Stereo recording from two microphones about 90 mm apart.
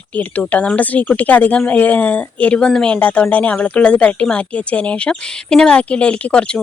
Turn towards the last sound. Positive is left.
turn(degrees=10)  # may be behind; listen again after turning